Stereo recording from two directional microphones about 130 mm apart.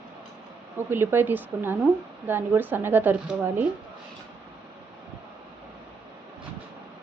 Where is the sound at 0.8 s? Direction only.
15° right (ahead or behind).